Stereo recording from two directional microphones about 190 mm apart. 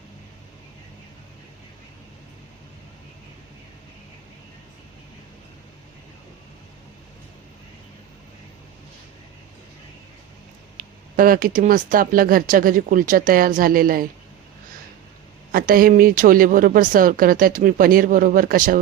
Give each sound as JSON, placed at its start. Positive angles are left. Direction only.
{"t": 10.8, "sound": "speech", "side_deg": -50}
{"t": 15.5, "sound": "speech", "side_deg": -50}